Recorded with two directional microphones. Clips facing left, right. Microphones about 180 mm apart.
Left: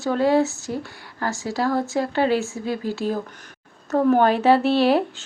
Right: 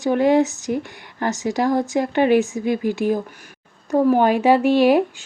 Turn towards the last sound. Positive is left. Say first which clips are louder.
# right 3 dB
turn(degrees=-10)  # may be behind; listen again after turning